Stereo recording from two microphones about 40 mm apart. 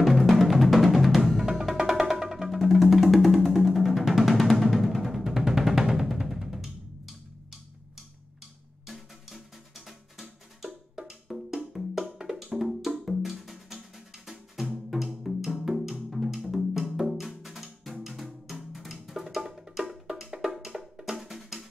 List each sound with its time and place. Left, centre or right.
0.0 s music: centre
8.8 s music: centre
11.1 s wood block: centre
12.3 s music: centre
20.5 s music: centre